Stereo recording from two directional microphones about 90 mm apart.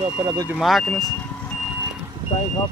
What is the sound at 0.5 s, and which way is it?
Speech, centre (ahead or behind).